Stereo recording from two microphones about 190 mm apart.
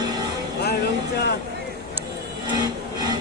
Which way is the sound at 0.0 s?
20° right (ahead or behind).